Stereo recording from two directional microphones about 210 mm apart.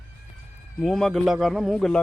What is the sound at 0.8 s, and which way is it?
Speech, centre (ahead or behind).